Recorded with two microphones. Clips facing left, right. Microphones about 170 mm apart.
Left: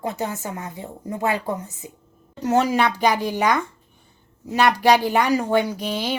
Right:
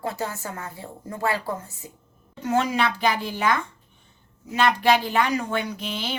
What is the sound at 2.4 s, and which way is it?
Speech, 40° left (ahead or behind).